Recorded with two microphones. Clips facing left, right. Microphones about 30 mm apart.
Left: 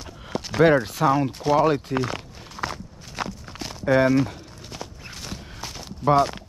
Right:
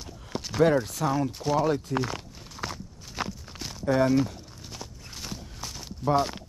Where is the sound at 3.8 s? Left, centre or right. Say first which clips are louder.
Left 5 dB; left.